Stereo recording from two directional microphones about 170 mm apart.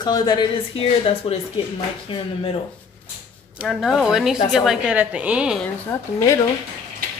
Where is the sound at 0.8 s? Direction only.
35° left (ahead or behind).